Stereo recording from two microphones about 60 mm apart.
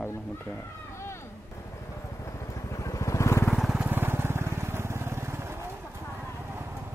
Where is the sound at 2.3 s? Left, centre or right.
Left.